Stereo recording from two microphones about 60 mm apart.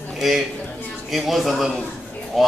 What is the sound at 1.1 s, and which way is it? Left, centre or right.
Speech, centre.